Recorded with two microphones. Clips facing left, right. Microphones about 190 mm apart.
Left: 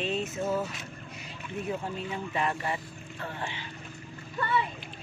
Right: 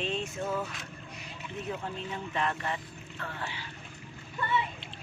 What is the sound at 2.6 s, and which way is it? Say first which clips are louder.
Speech: left 2 dB; 15° left (ahead or behind).